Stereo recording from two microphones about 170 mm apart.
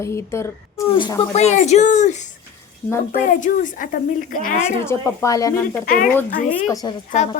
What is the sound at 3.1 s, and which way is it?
Speech, 50° left (ahead or behind).